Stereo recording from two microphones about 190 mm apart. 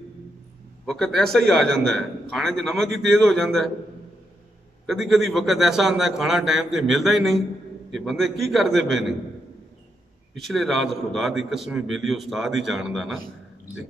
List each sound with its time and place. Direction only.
0.8 s a man's voice: centre (ahead or behind)
4.8 s a man's voice: centre (ahead or behind)
10.3 s a man's voice: centre (ahead or behind)